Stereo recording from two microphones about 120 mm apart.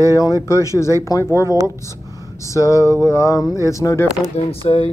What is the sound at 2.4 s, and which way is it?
Speech, 25° left (ahead or behind).